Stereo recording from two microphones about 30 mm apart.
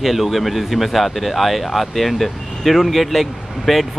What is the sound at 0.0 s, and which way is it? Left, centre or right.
Speech, centre.